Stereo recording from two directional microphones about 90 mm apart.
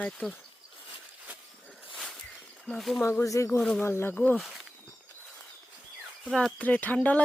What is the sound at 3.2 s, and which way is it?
Speech, 35° left (ahead or behind).